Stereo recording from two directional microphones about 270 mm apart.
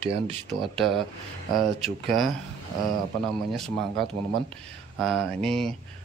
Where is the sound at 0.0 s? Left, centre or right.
Right.